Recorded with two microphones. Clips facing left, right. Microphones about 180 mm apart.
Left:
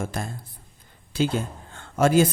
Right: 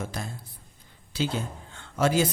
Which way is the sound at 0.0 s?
50° left (ahead or behind).